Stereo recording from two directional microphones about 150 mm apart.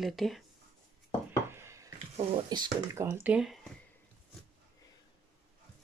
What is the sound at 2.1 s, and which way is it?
Speech, 35° right (ahead or behind).